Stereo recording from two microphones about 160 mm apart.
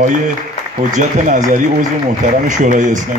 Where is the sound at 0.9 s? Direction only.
50° right (ahead or behind).